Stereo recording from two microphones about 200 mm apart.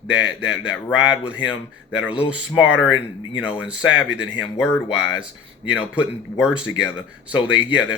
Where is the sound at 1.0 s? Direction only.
5° right (ahead or behind).